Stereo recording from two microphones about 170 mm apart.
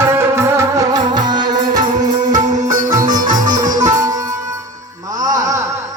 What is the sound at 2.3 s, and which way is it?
Music, 45° right (ahead or behind).